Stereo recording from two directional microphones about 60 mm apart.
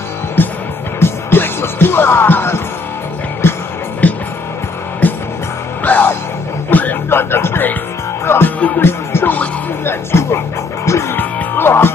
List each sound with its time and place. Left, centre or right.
0.4 s music: left
4.0 s music: left
9.8 s speech: left
10.9 s music: left
11.1 s music: left